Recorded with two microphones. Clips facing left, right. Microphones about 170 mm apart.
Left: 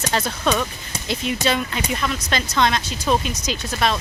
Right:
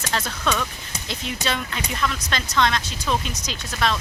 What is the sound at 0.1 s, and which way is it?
Speech, 20° left (ahead or behind).